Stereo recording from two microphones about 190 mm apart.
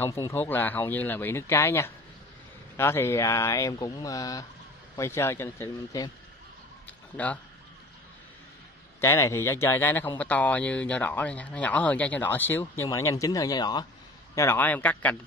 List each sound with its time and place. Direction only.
0.0 s speech: 15° left (ahead or behind)
6.9 s a sound: 10° left (ahead or behind)
9.0 s speech: 15° left (ahead or behind)